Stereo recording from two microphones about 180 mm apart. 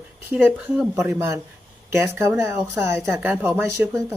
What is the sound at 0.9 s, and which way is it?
Speech, 15° right (ahead or behind).